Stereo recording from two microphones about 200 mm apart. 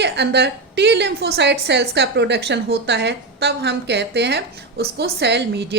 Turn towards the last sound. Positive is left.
turn(degrees=-55)  # may be behind; listen again after turning